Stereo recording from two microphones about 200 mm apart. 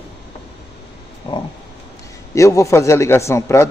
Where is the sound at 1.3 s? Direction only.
25° left (ahead or behind).